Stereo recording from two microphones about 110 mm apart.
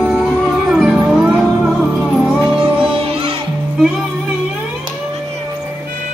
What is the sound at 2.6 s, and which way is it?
Music, 55° right (ahead or behind).